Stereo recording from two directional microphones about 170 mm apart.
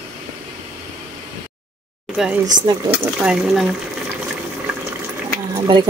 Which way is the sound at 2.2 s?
5° right (ahead or behind).